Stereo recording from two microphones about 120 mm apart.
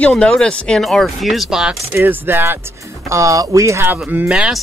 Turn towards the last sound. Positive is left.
turn(degrees=-10)  # may be behind; listen again after turning